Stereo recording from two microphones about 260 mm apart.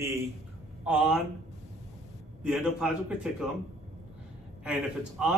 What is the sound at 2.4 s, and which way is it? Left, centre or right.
Speech, centre.